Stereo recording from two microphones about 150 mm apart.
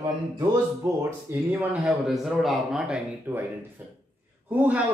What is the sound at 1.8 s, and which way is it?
A man's voice, centre (ahead or behind).